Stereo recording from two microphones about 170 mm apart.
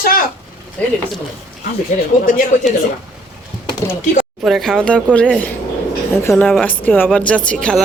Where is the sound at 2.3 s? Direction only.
55° left (ahead or behind).